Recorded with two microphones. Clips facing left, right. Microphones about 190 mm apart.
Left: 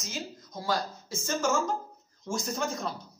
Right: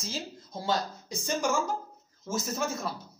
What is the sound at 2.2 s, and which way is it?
Speech, 5° right (ahead or behind).